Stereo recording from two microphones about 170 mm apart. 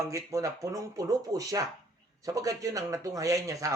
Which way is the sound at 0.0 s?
20° right (ahead or behind).